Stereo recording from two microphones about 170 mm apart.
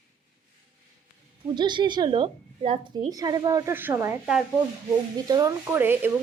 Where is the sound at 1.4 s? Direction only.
25° right (ahead or behind).